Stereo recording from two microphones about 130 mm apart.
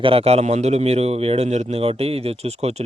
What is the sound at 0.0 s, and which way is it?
A man's voice, 45° right (ahead or behind).